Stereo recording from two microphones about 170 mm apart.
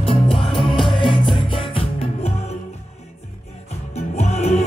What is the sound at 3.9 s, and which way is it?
Music, 40° left (ahead or behind).